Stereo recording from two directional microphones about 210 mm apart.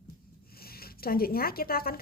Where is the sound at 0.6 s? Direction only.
45° left (ahead or behind).